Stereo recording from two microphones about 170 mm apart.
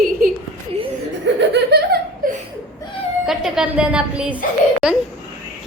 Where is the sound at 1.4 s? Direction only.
75° right (ahead or behind).